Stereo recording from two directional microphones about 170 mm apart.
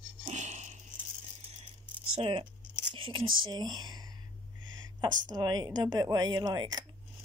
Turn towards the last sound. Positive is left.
turn(degrees=-25)  # may be behind; listen again after turning